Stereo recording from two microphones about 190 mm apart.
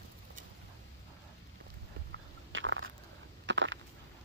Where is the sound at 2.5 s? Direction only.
85° right.